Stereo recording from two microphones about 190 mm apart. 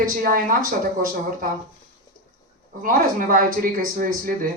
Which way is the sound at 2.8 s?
45° right (ahead or behind).